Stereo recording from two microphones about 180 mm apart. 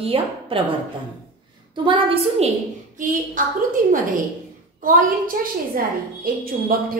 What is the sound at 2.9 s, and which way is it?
Speech, 45° right (ahead or behind).